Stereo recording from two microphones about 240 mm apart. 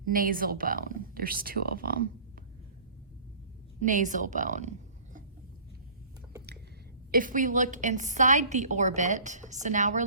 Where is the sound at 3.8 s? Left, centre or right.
Right.